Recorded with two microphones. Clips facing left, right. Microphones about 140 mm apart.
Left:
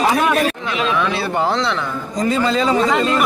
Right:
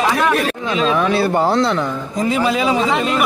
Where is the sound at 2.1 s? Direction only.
10° right (ahead or behind).